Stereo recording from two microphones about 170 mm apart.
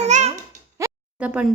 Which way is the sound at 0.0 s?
40° right (ahead or behind).